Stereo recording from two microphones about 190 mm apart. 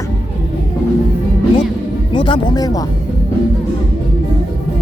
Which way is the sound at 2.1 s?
25° left (ahead or behind).